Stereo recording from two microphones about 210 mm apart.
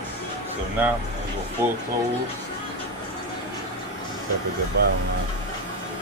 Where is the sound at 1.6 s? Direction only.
10° right (ahead or behind).